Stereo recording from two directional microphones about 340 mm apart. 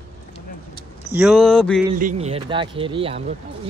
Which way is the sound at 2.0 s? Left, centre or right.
Right.